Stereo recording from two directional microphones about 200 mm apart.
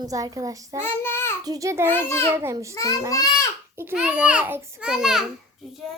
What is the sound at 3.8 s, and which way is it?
A child's voice, 10° right (ahead or behind).